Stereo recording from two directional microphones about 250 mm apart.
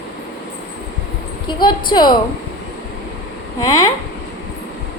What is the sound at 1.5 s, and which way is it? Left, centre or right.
Speech, centre.